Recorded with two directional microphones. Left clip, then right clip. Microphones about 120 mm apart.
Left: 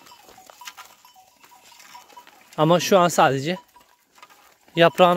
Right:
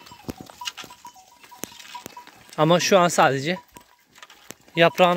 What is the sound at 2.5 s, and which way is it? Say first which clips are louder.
Speech: even; 40° left (ahead or behind).